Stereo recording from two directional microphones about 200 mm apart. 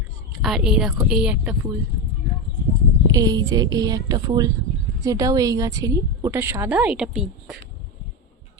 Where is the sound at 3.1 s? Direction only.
20° right (ahead or behind); by 7.5 s 5° right (ahead or behind).